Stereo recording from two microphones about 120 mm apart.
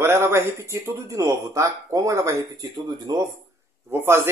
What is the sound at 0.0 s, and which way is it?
Speech, 20° right (ahead or behind).